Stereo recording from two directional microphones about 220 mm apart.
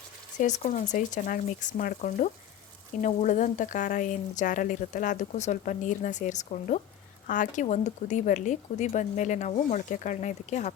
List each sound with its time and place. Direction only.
0.3 s a woman's voice: 35° left (ahead or behind)